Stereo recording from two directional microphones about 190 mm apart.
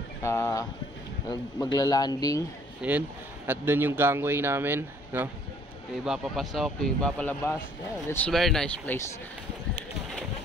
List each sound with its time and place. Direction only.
0.2 s speech: 15° left (ahead or behind)
1.8 s a man's voice: 20° left (ahead or behind)
2.8 s speech: 5° right (ahead or behind)